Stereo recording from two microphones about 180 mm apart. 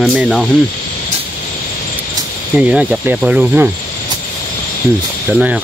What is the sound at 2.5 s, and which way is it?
Speech, 5° right (ahead or behind).